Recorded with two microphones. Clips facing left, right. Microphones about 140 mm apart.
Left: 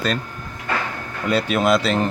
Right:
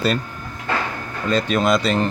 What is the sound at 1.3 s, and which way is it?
Speech, 10° left (ahead or behind).